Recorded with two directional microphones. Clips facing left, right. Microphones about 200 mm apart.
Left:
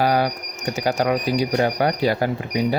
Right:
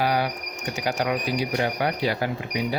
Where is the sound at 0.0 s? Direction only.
45° left (ahead or behind).